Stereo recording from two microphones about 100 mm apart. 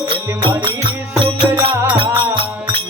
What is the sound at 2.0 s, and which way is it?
Music, 55° right (ahead or behind).